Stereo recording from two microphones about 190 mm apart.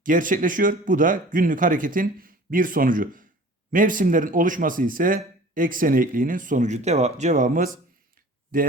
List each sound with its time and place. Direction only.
0.0 s a man's voice: 45° right (ahead or behind)